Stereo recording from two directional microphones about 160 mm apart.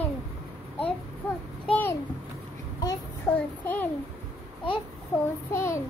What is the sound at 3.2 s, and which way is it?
Child singing, 10° left (ahead or behind).